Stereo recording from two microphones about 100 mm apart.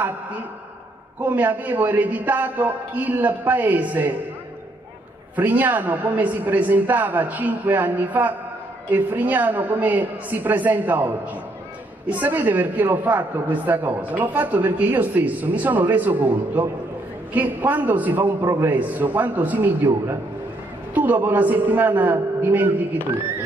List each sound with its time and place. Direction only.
1.2 s a woman's voice: 15° right (ahead or behind)
5.3 s a woman's voice: 15° right (ahead or behind)
12.1 s a woman's voice: 20° right (ahead or behind)